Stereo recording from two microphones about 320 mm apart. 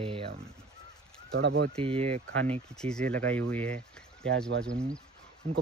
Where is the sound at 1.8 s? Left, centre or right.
Centre.